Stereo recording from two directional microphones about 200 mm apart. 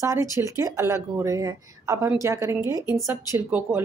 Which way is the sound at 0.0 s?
15° right (ahead or behind).